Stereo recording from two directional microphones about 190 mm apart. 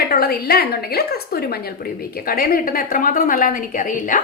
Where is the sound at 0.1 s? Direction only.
55° left (ahead or behind).